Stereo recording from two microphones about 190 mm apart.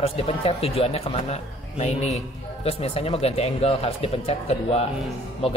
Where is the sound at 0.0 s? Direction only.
30° left (ahead or behind).